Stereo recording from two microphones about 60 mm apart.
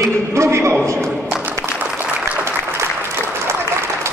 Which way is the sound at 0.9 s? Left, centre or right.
Right.